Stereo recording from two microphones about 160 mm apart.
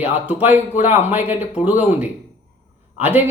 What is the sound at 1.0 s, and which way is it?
Speech, 10° right (ahead or behind).